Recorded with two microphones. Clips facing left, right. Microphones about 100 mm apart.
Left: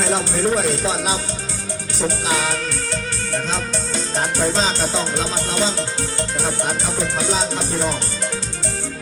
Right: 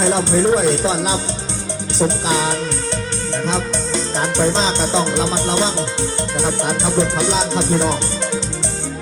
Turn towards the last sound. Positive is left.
turn(degrees=-25)  # may be behind; listen again after turning